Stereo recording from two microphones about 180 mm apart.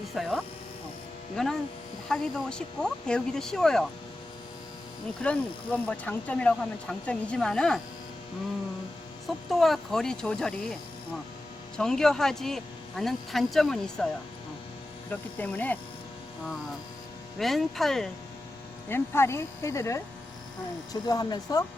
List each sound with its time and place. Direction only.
0.1 s speech: centre (ahead or behind)
5.2 s speech: 5° left (ahead or behind)
9.5 s speech: centre (ahead or behind)
11.8 s speech: 5° left (ahead or behind)
15.1 s speech: 10° left (ahead or behind)
17.3 s speech: centre (ahead or behind)
18.9 s speech: 15° left (ahead or behind)